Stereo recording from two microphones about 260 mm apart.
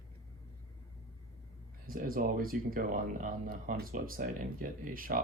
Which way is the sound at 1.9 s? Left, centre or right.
Right.